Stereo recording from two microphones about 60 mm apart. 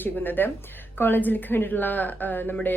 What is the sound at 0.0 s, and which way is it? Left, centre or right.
A woman's voice, left.